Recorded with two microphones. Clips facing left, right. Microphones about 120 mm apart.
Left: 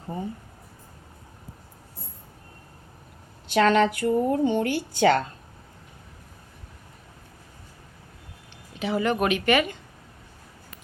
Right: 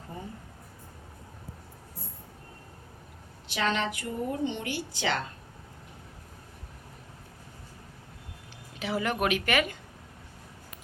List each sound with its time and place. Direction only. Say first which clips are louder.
3.5 s speech: left 10 dB; 50° left (ahead or behind)
8.8 s speech: left 5 dB; centre (ahead or behind)